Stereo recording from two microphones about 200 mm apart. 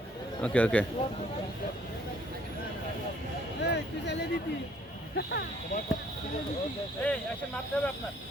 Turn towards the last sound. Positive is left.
turn(degrees=5)  # may be behind; listen again after turning